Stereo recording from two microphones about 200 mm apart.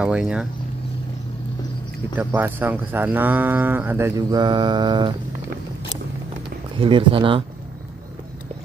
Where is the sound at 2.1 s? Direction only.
10° right (ahead or behind).